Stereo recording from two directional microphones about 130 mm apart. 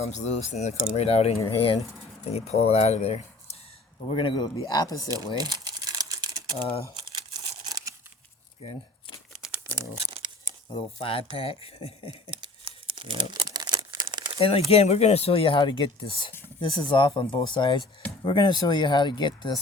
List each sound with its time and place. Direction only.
0.1 s speech: 60° left (ahead or behind); by 1.8 s 45° left (ahead or behind)
2.3 s speech: 55° left (ahead or behind)
4.1 s speech: 40° left (ahead or behind)
5.3 s crumpling: 30° right (ahead or behind)
8.6 s speech: 55° left (ahead or behind)
9.3 s crumpling: 5° right (ahead or behind)
10.0 s tearing: 45° right (ahead or behind)
10.8 s speech: 45° left (ahead or behind)
12.6 s crumpling: 40° right (ahead or behind)
14.3 s speech: 50° left (ahead or behind)